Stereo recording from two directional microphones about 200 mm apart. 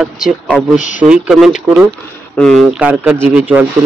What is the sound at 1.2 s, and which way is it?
A man's voice, centre (ahead or behind).